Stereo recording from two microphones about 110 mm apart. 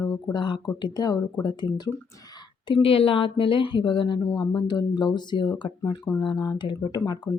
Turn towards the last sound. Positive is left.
turn(degrees=35)  # may be behind; listen again after turning